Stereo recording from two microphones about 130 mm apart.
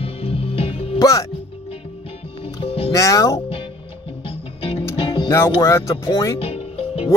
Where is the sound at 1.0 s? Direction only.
25° left (ahead or behind).